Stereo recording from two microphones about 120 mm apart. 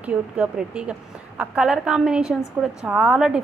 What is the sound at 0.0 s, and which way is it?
A woman's voice, 10° right (ahead or behind).